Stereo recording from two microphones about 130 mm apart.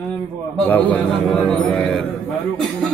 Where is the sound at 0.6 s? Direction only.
10° left (ahead or behind).